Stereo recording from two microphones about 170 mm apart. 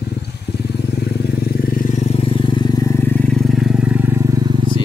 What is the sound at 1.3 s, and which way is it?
Vehicle, 60° left (ahead or behind).